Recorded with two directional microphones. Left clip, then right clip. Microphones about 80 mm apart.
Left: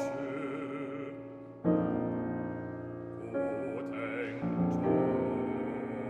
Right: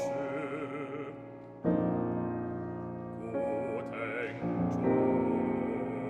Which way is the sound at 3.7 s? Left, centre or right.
Right.